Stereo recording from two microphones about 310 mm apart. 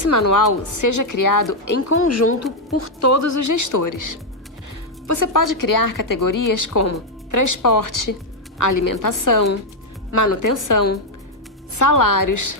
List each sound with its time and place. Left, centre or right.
0.0 s speech: left
2.0 s speech: left
8.5 s a woman's voice: left
10.2 s speech: left
10.6 s speech: left